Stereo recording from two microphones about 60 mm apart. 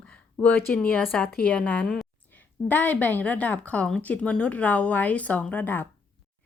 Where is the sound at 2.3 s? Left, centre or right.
Left.